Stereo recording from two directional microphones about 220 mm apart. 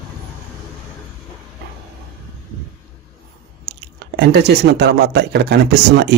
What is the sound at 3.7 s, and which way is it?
Speech, 50° right (ahead or behind).